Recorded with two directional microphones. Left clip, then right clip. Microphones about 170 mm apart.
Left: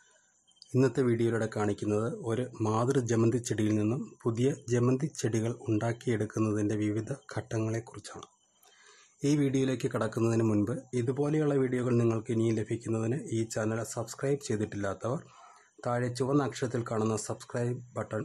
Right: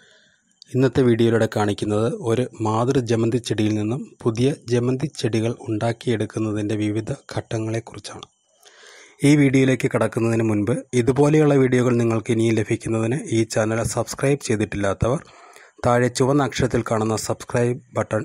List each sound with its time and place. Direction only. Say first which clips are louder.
0.7 s speech: right 9 dB; 30° right (ahead or behind)